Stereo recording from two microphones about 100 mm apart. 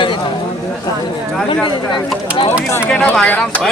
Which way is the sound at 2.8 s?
15° left (ahead or behind).